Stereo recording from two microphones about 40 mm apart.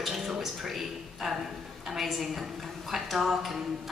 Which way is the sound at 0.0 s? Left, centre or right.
Centre.